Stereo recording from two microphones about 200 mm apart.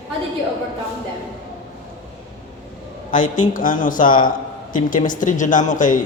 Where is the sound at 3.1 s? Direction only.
40° left (ahead or behind).